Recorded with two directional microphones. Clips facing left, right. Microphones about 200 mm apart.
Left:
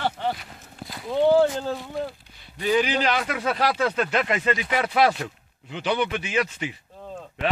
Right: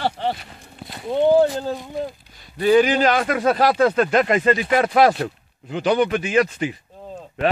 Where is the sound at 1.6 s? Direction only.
15° right (ahead or behind).